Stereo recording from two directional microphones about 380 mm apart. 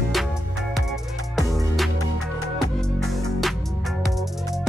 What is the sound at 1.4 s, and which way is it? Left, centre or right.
Music, centre.